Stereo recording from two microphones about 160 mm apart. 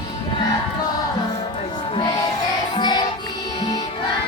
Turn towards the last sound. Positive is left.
turn(degrees=25)  # may be behind; listen again after turning